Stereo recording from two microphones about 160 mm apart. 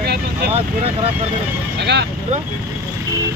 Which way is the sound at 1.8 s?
90° right.